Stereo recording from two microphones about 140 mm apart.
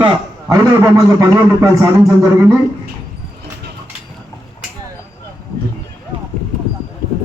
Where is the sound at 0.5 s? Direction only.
25° right (ahead or behind).